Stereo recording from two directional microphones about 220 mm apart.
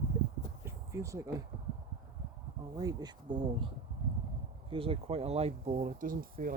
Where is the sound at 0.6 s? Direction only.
15° right (ahead or behind).